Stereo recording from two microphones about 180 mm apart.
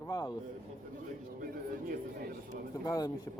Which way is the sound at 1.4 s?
55° right (ahead or behind).